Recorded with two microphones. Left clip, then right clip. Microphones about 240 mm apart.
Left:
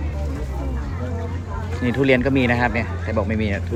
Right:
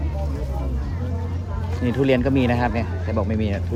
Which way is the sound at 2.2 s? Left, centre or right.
Centre.